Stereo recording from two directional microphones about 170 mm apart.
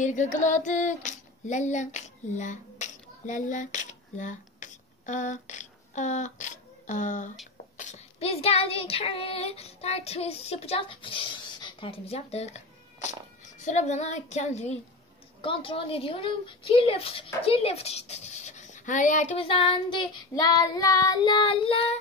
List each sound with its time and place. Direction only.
0.0 s female singing: 45° left (ahead or behind)
7.7 s child singing: 45° left (ahead or behind)
13.6 s speech: 45° left (ahead or behind)
19.4 s child singing: 30° left (ahead or behind)